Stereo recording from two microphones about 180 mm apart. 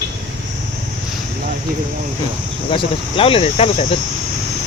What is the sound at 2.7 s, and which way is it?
Speech, 30° left (ahead or behind).